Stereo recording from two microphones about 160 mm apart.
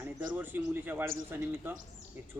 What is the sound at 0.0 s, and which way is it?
A man's voice, 10° right (ahead or behind).